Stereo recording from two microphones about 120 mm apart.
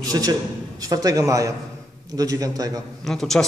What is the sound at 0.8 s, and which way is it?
A man's voice, 30° right (ahead or behind).